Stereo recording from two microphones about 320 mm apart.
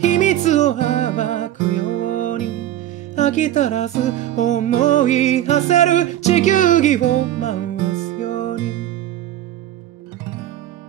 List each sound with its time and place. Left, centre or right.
0.0 s music: left